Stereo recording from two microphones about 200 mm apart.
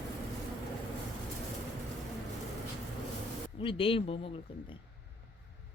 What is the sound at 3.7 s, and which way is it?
Speech, 25° left (ahead or behind).